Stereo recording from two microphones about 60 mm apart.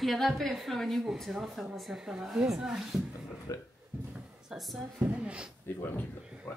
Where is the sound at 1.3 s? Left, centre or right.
Centre.